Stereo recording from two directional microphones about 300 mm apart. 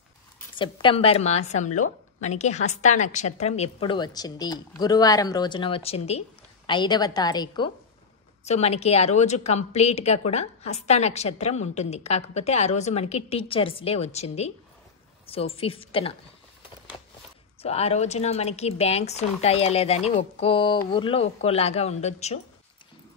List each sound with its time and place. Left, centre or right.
0.6 s a woman's voice: centre
17.6 s speech: centre